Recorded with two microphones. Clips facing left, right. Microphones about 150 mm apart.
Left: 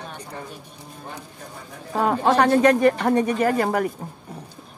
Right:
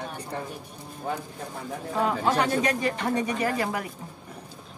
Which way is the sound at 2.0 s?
55° left (ahead or behind).